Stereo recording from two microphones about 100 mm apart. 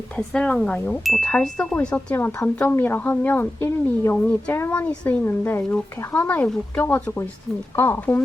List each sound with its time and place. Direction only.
0.2 s speech: 10° left (ahead or behind)
2.1 s a woman's voice: 25° left (ahead or behind)